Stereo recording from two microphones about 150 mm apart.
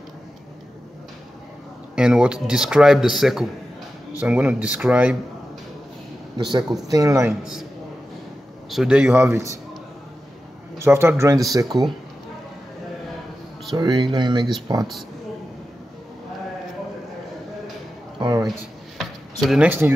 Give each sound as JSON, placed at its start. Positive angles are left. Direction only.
{"t": 2.0, "sound": "a man's voice", "side_deg": -5}
{"t": 6.3, "sound": "a man's voice", "side_deg": -30}
{"t": 8.6, "sound": "a man's voice", "side_deg": -5}
{"t": 9.3, "sound": "a man's voice", "side_deg": -20}
{"t": 10.8, "sound": "speech", "side_deg": -15}
{"t": 13.7, "sound": "a man's voice", "side_deg": -30}
{"t": 18.2, "sound": "a sound", "side_deg": -25}
{"t": 18.9, "sound": "a sound", "side_deg": 0}